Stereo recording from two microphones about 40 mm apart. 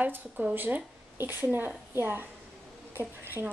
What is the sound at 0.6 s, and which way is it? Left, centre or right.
Speech, right.